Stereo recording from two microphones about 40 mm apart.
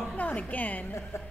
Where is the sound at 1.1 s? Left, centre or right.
Left.